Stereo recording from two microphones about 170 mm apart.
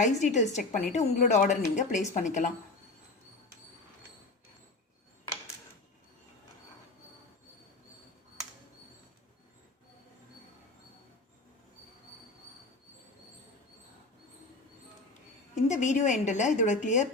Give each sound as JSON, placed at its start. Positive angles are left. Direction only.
{"t": 0.0, "sound": "a woman's voice", "side_deg": 45}
{"t": 15.6, "sound": "a woman's voice", "side_deg": 45}